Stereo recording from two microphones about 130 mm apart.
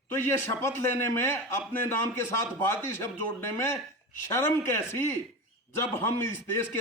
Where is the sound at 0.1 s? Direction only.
20° left (ahead or behind).